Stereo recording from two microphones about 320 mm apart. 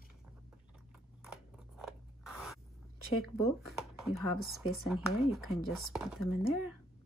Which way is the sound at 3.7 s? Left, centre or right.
Centre.